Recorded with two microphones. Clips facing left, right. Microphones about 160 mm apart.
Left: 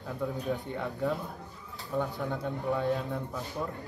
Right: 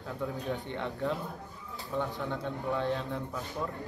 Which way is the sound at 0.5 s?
5° left (ahead or behind).